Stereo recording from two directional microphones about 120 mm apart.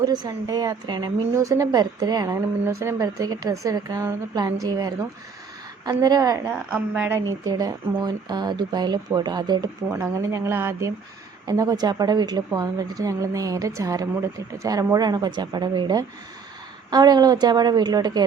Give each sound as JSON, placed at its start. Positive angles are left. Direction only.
{"t": 0.0, "sound": "a woman's voice", "side_deg": -35}
{"t": 6.5, "sound": "a woman's voice", "side_deg": -10}
{"t": 7.9, "sound": "a woman's voice", "side_deg": -35}
{"t": 9.9, "sound": "a woman's voice", "side_deg": -25}